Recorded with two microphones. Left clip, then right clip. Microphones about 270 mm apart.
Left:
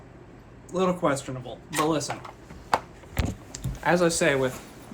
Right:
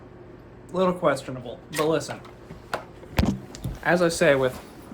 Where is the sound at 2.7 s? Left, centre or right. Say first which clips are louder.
Left 6 dB; centre.